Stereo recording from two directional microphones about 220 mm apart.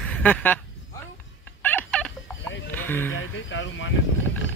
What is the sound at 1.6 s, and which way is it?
Fowl, 10° left (ahead or behind).